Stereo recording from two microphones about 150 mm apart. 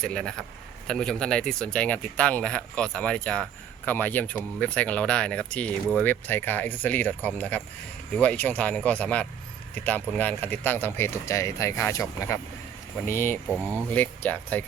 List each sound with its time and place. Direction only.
0.0 s a man's voice: 5° left (ahead or behind)
13.5 s speech: 10° right (ahead or behind)
13.9 s speech: 10° left (ahead or behind)